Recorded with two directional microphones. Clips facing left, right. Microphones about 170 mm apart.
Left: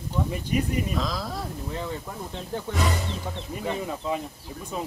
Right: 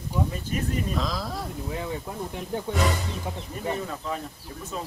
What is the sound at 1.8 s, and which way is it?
Speech, 15° right (ahead or behind).